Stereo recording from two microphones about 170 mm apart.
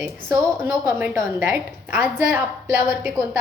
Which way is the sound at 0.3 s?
15° right (ahead or behind).